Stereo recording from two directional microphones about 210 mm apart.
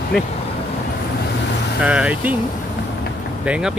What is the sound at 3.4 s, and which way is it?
Speech, 5° right (ahead or behind).